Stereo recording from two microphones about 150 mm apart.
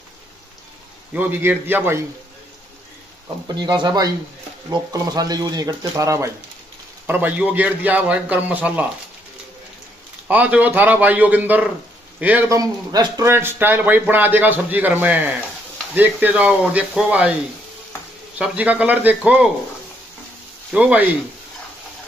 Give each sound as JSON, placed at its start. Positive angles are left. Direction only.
{"t": 1.1, "sound": "a man's voice", "side_deg": -15}
{"t": 3.4, "sound": "a man's voice", "side_deg": -30}
{"t": 10.2, "sound": "a man's voice", "side_deg": -10}
{"t": 12.4, "sound": "a man's voice", "side_deg": -25}
{"t": 18.4, "sound": "a man's voice", "side_deg": -10}
{"t": 20.7, "sound": "a man's voice", "side_deg": -10}